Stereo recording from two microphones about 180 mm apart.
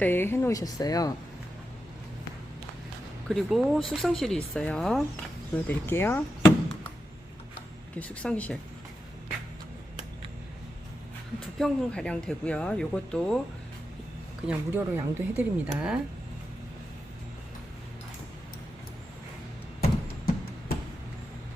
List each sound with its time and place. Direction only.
0.0 s speech: 10° left (ahead or behind)
3.2 s speech: centre (ahead or behind)
7.9 s speech: 5° left (ahead or behind)
11.6 s speech: 5° left (ahead or behind)
14.4 s speech: 10° right (ahead or behind)
19.8 s a sound: 60° left (ahead or behind)